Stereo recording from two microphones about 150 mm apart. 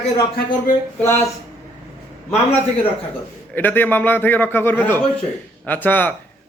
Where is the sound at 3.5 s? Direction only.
15° left (ahead or behind).